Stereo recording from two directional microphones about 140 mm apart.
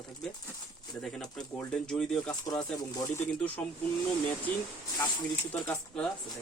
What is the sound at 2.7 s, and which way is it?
Speech, 25° left (ahead or behind).